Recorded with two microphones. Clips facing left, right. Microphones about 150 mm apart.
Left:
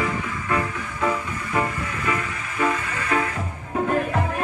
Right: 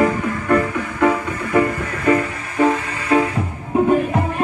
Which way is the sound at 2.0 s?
40° right (ahead or behind).